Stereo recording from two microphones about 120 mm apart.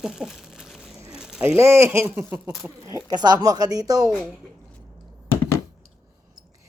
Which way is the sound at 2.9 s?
30° right (ahead or behind).